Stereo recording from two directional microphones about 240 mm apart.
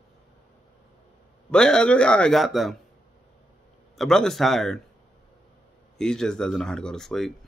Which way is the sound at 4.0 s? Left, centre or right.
Centre.